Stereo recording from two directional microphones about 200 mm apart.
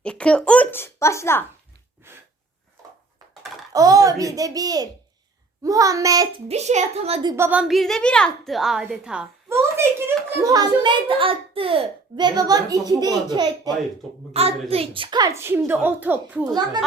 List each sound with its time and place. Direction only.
0.0 s a woman's voice: 5° left (ahead or behind)
3.7 s a child's voice: 15° right (ahead or behind)
6.5 s a woman's voice: 35° right (ahead or behind); by 16.5 s 10° right (ahead or behind)